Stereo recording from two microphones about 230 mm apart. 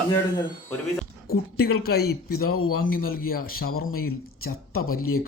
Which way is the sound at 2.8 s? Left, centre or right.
Left.